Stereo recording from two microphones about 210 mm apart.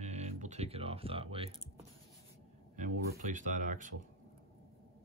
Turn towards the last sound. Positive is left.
turn(degrees=-35)  # may be behind; listen again after turning